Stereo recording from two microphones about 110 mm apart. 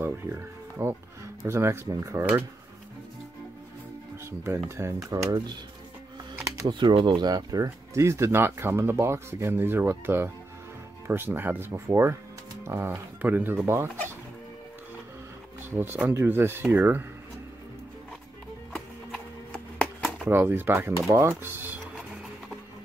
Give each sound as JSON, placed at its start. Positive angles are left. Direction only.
{"t": 0.0, "sound": "speech", "side_deg": -20}
{"t": 4.3, "sound": "speech", "side_deg": -25}
{"t": 6.7, "sound": "speech", "side_deg": -45}
{"t": 15.7, "sound": "speech", "side_deg": -20}
{"t": 18.7, "sound": "music", "side_deg": 10}
{"t": 20.2, "sound": "speech", "side_deg": -20}